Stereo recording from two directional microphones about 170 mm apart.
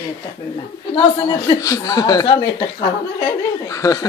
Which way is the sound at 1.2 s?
20° left (ahead or behind).